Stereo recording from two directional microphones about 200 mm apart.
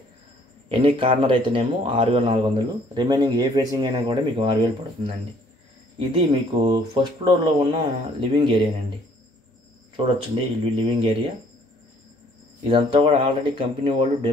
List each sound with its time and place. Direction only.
0.7 s a man's voice: 25° right (ahead or behind)
5.9 s a man's voice: 25° right (ahead or behind)
9.9 s a man's voice: 25° right (ahead or behind)
12.6 s a man's voice: 25° right (ahead or behind)